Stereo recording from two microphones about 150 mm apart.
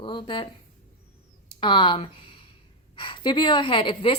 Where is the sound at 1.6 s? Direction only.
30° left (ahead or behind).